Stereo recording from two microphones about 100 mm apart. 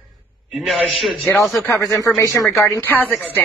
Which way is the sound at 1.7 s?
35° left (ahead or behind).